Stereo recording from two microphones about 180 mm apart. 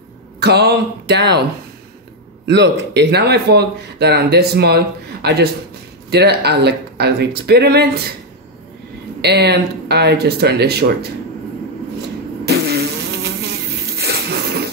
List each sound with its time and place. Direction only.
0.4 s speech: 65° right (ahead or behind)
2.4 s speech: 75° right (ahead or behind)
9.2 s speech: 65° right (ahead or behind)
12.4 s insect: 65° right (ahead or behind)